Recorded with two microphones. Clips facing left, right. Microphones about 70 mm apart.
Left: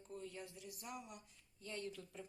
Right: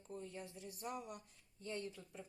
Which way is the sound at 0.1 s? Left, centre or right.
Right.